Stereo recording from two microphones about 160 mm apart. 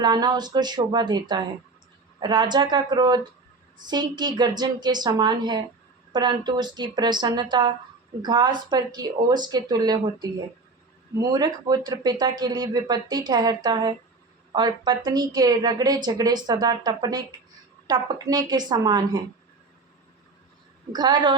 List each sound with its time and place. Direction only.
0.0 s speech: 25° right (ahead or behind)
20.9 s speech: 25° right (ahead or behind)